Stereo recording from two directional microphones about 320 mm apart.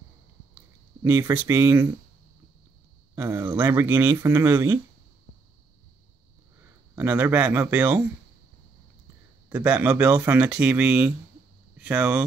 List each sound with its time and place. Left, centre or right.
1.0 s speech: centre
3.2 s speech: centre
7.0 s speech: centre
9.5 s speech: centre